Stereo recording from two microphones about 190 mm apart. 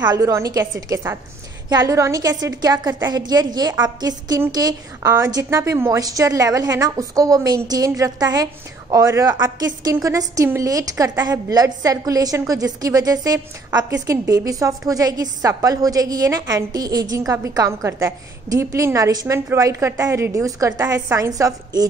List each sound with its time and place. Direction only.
0.0 s a woman's voice: 20° right (ahead or behind)